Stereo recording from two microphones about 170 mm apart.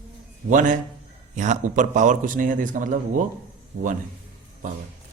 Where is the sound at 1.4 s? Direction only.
45° right (ahead or behind).